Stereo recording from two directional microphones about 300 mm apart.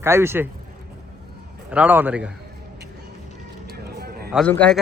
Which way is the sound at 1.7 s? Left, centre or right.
Centre.